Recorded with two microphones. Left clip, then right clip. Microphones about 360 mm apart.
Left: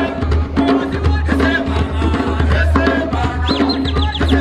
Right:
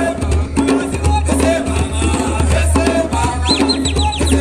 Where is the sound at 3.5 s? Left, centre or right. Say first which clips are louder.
Right 1 dB; centre.